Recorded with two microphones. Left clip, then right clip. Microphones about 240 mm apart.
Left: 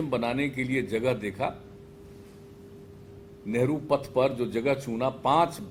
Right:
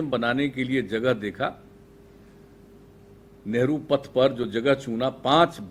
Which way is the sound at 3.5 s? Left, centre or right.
Right.